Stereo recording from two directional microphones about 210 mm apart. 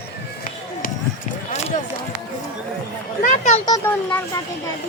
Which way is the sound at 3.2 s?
35° left (ahead or behind).